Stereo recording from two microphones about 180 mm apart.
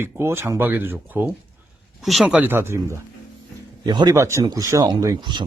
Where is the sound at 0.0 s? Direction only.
15° right (ahead or behind).